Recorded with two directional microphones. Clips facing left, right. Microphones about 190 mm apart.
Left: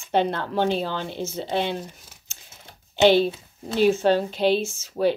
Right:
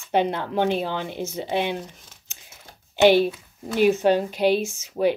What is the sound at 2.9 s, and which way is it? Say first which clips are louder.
Speech: right 1 dB; 15° right (ahead or behind).